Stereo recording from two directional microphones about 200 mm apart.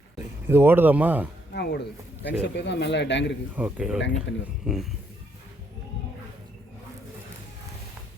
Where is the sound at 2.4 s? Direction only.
60° left (ahead or behind).